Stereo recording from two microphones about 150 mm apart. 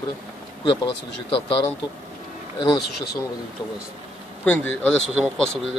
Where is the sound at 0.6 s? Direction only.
35° left (ahead or behind).